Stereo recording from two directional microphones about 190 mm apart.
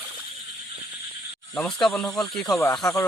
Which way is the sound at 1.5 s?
5° left (ahead or behind).